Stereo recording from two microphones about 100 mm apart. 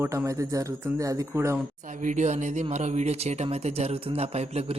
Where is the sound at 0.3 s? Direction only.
35° right (ahead or behind).